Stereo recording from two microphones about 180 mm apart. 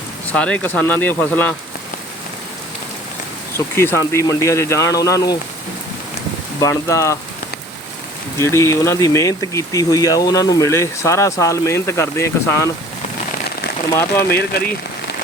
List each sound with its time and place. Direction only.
0.3 s speech: 5° left (ahead or behind)
3.8 s speech: 15° left (ahead or behind)
6.6 s speech: 15° left (ahead or behind)
8.4 s speech: 15° left (ahead or behind)
13.9 s speech: 15° left (ahead or behind)
14.5 s speech: 65° left (ahead or behind)